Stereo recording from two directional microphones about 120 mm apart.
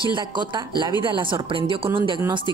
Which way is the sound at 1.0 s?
45° right (ahead or behind).